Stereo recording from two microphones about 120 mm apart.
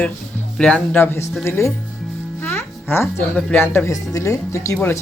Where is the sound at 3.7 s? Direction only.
25° left (ahead or behind).